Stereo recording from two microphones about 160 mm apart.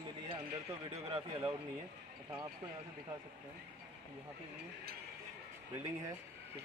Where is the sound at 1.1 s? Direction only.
35° right (ahead or behind).